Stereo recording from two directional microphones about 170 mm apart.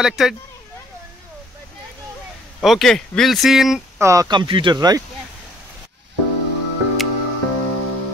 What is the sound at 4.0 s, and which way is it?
Speech, 20° right (ahead or behind).